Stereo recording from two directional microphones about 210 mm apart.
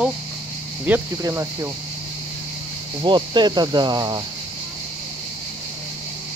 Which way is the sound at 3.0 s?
20° right (ahead or behind).